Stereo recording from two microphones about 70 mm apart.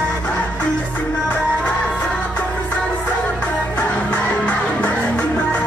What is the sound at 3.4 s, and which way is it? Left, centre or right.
Music, left.